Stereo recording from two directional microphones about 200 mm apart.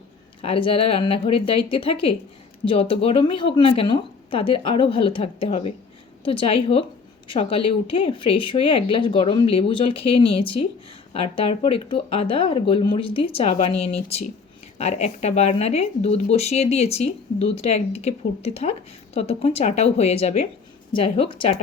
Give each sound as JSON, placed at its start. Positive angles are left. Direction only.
{"t": 0.4, "sound": "speech", "side_deg": 25}